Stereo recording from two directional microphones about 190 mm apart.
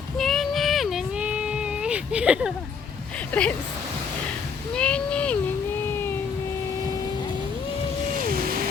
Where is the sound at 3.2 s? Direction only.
5° left (ahead or behind).